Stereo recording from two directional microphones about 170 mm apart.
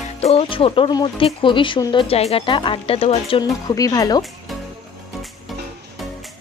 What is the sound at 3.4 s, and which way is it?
Speech, 20° left (ahead or behind).